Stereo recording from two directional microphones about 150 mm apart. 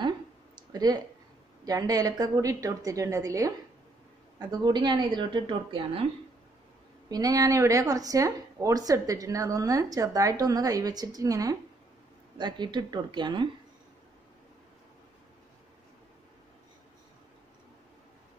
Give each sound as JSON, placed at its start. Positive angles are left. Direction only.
{"t": 0.6, "sound": "a sound", "side_deg": -25}
{"t": 1.6, "sound": "a woman's voice", "side_deg": -25}
{"t": 7.1, "sound": "a woman's voice", "side_deg": -25}